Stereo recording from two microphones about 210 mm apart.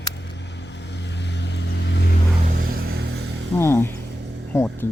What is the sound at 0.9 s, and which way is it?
Vehicle, 55° left (ahead or behind).